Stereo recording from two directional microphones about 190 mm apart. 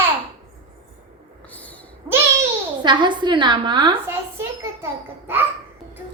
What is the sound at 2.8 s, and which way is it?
A woman's voice, 25° right (ahead or behind).